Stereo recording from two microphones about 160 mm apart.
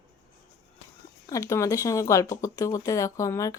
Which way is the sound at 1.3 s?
20° left (ahead or behind).